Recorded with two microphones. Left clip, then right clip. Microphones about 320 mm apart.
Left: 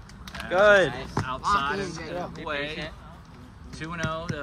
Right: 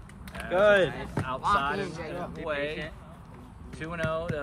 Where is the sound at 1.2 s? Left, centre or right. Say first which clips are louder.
Left 1 dB; centre.